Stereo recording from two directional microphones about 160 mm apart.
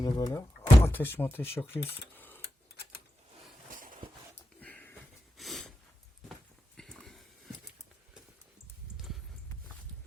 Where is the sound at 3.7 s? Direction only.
55° right (ahead or behind).